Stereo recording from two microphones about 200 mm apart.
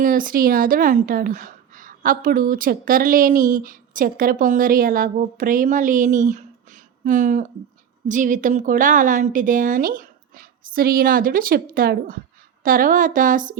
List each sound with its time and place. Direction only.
0.0 s a woman's voice: 45° right (ahead or behind)